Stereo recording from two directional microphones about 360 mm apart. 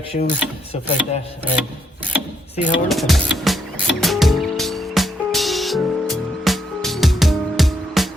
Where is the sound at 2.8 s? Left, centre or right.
Centre.